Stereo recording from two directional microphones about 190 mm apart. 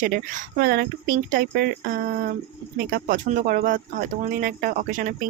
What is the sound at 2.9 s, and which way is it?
Speech, 50° right (ahead or behind).